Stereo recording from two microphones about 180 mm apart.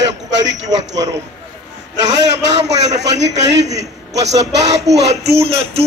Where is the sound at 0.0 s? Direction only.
85° right.